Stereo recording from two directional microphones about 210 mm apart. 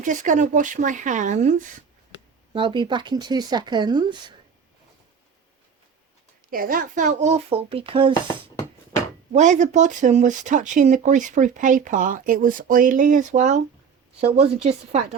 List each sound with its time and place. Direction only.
0.0 s speech: 35° right (ahead or behind)
2.5 s speech: 25° right (ahead or behind)
6.5 s speech: 40° right (ahead or behind)